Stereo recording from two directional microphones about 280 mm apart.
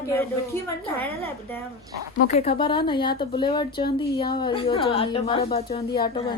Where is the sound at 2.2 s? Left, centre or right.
Left.